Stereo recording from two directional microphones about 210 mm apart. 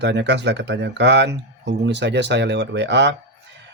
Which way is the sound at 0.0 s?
55° right (ahead or behind).